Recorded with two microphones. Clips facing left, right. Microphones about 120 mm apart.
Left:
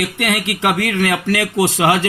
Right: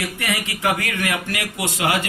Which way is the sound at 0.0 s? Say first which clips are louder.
Left 6 dB; 65° left (ahead or behind).